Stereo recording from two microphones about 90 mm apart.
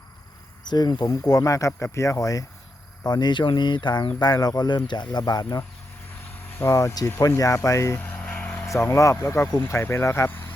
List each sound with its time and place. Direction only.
0.7 s speech: 50° left (ahead or behind)
1.3 s speech: 35° left (ahead or behind)
3.1 s speech: 55° left (ahead or behind)
6.4 s speech: 25° left (ahead or behind)
8.0 s vehicle: 20° left (ahead or behind)
8.6 s speech: 30° left (ahead or behind)